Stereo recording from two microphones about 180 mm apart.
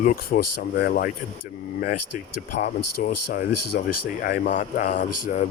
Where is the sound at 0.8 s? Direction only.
60° left (ahead or behind).